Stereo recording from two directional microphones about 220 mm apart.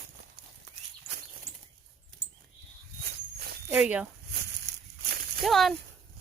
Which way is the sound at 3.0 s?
45° right (ahead or behind).